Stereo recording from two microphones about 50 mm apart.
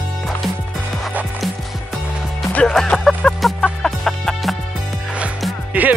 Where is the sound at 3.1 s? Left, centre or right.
Left.